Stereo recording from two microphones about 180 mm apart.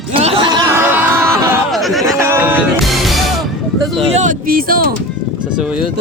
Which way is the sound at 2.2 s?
10° right (ahead or behind).